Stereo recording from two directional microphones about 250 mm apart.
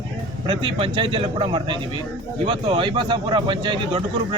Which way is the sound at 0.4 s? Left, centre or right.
Right.